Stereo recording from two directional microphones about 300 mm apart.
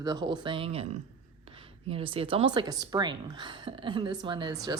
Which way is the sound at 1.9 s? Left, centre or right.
Centre.